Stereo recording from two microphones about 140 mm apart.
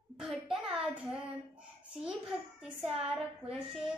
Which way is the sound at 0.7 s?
5° right (ahead or behind).